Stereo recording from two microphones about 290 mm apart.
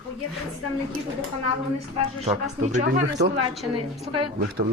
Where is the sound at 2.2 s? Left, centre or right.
Right.